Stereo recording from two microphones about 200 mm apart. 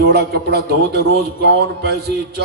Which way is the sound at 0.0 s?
55° right (ahead or behind).